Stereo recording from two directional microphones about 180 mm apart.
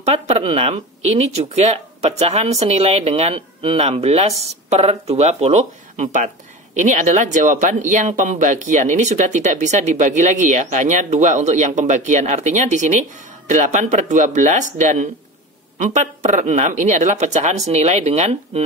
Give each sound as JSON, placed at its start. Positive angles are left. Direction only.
{"t": 0.0, "sound": "speech", "side_deg": -35}